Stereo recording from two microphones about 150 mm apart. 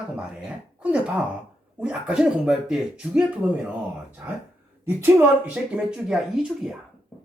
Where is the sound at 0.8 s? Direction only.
10° right (ahead or behind).